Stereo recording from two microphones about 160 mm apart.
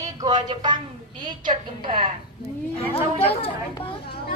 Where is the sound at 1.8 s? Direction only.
30° right (ahead or behind).